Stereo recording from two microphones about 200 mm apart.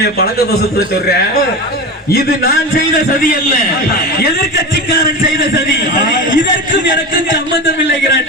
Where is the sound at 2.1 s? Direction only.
50° left (ahead or behind).